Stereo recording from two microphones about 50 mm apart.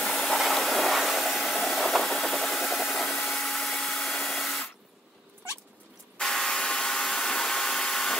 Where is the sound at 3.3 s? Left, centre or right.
Centre.